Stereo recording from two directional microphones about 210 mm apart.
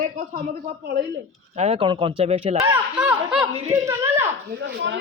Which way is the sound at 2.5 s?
10° right (ahead or behind).